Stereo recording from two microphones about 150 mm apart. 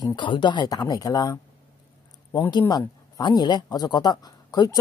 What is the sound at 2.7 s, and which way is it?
Speech, 25° left (ahead or behind).